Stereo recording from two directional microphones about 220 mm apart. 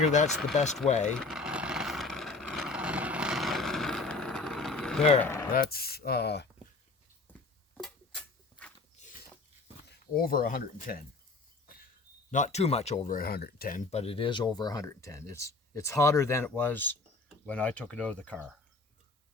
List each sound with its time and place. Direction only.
0.0 s speech: 35° left (ahead or behind)
1.2 s vehicle: centre (ahead or behind)
5.5 s speech: 45° left (ahead or behind)
7.3 s a sound: 10° left (ahead or behind)
9.0 s a sound: 30° left (ahead or behind)
10.2 s speech: 40° left (ahead or behind)
12.3 s speech: 30° left (ahead or behind); by 18.5 s 5° left (ahead or behind)